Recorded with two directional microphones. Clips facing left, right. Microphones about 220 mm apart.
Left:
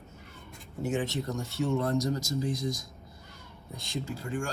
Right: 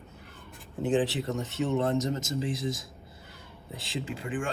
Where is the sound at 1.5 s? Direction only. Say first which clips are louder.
Right 1 dB; 20° right (ahead or behind).